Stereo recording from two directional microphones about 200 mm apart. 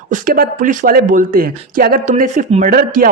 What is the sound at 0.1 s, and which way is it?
Speech, 45° right (ahead or behind).